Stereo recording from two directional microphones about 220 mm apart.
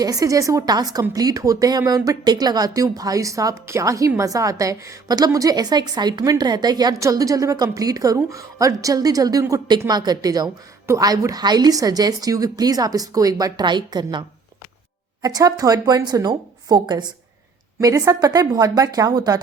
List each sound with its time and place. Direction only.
0.0 s speech: 15° right (ahead or behind)